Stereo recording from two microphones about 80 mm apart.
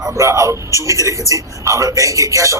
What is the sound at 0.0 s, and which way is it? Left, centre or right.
A man's voice, right.